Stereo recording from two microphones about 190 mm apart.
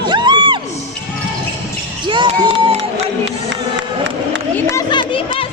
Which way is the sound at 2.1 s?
30° right (ahead or behind).